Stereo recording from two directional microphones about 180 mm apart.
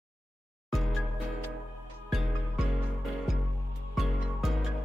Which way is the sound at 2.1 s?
Centre (ahead or behind).